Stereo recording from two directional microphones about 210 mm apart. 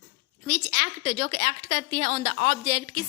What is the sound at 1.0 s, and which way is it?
A woman's voice, 30° right (ahead or behind).